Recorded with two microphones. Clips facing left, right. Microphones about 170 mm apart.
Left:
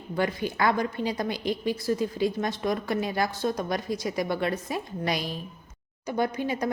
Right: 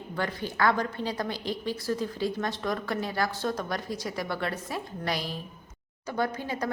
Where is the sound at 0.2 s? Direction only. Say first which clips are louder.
Left 2 dB; 15° left (ahead or behind).